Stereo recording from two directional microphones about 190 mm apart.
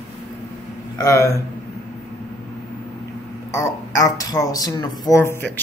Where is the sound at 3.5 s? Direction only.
15° left (ahead or behind).